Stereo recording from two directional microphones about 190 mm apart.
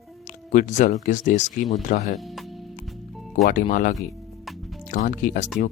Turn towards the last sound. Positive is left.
turn(degrees=45)  # may be behind; listen again after turning